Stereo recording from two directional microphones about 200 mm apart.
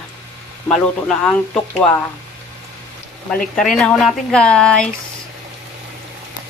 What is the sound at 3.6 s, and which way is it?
Speech, centre (ahead or behind).